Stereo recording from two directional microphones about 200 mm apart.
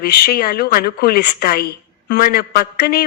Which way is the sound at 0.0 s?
50° left (ahead or behind).